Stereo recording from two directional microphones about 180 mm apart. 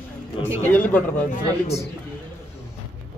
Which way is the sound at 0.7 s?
10° left (ahead or behind).